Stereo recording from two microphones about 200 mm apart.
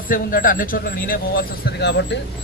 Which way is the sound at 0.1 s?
45° left (ahead or behind).